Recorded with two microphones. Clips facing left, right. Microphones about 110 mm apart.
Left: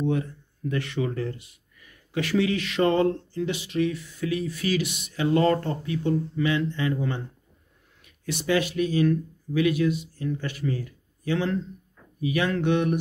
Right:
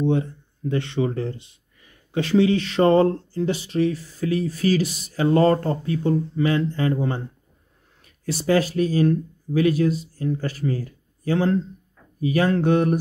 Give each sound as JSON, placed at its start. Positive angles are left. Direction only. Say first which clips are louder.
{"t": 0.0, "sound": "speech", "louder": "right 4 dB", "side_deg": -30}